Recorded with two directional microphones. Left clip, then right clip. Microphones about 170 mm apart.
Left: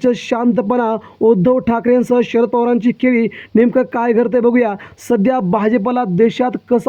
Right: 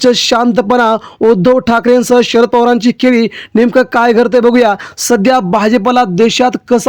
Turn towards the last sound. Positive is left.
turn(degrees=-40)  # may be behind; listen again after turning